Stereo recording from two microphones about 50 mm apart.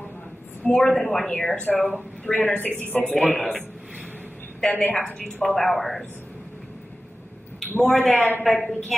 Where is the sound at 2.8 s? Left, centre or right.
Left.